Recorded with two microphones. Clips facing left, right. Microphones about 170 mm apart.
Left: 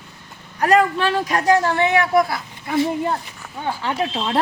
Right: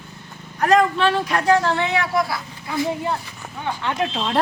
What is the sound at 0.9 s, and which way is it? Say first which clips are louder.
Speech: even; 40° left (ahead or behind).